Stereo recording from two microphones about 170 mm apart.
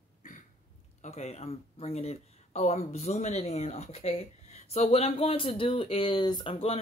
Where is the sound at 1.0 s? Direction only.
40° left (ahead or behind).